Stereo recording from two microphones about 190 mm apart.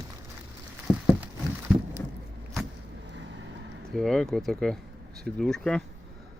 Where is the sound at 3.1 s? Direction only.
70° right (ahead or behind).